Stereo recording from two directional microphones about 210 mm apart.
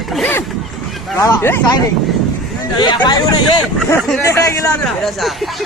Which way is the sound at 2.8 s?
20° left (ahead or behind).